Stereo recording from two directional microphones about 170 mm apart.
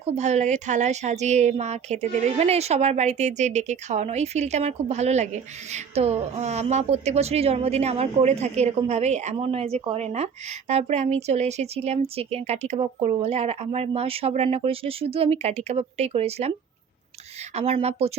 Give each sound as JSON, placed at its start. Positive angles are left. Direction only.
{"t": 0.0, "sound": "speech", "side_deg": -40}
{"t": 17.5, "sound": "speech", "side_deg": -35}